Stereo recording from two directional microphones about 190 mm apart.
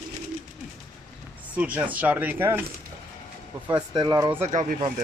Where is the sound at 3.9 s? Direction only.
20° right (ahead or behind).